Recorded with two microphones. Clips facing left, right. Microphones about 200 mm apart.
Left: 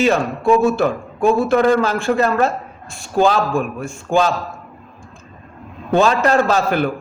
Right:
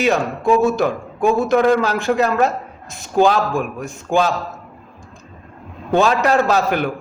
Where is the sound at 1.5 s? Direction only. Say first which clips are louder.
Right 1 dB; centre (ahead or behind).